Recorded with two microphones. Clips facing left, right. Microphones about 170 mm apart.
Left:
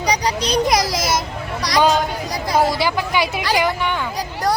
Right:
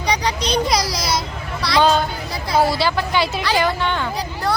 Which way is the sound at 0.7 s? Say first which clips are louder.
Left 2 dB; 50° left (ahead or behind).